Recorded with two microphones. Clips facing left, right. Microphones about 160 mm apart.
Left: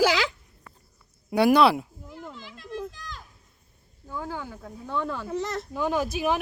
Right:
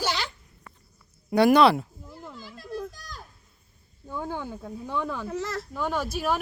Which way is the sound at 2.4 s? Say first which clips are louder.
Right 1 dB; 40° right (ahead or behind).